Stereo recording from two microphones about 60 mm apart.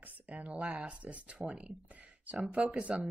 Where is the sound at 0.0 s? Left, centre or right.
Right.